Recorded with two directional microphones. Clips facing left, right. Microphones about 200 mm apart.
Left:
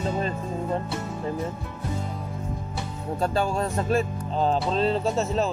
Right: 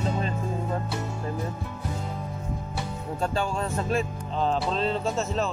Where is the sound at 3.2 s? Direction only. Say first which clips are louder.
Left 3 dB; 40° left (ahead or behind).